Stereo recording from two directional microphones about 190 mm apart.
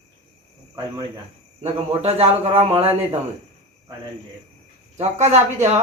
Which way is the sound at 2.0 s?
35° right (ahead or behind).